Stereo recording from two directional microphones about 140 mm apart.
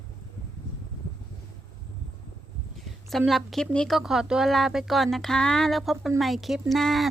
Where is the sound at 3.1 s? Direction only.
Centre (ahead or behind).